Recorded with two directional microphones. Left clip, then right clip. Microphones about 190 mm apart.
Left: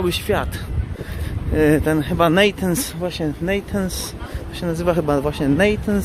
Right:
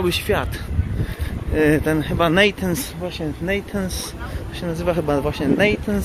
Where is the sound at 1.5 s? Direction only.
10° left (ahead or behind).